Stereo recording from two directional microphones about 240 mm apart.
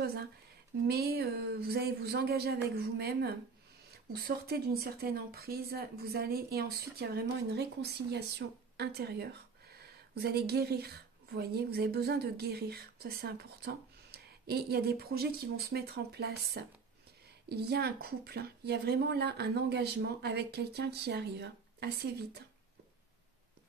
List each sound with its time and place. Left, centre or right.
0.0 s speech: right